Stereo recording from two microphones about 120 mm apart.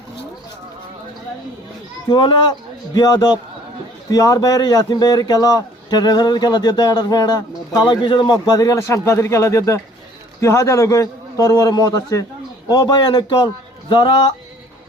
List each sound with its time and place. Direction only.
2.0 s a man's voice: 40° left (ahead or behind)